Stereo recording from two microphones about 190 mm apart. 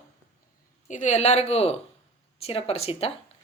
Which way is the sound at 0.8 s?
40° left (ahead or behind).